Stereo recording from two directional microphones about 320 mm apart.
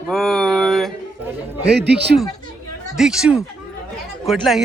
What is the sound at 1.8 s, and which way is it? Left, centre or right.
Speech, right.